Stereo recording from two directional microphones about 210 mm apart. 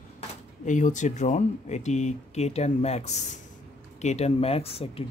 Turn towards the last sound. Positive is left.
turn(degrees=25)  # may be behind; listen again after turning